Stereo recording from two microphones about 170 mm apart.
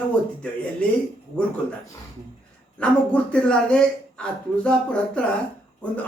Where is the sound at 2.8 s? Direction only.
5° left (ahead or behind).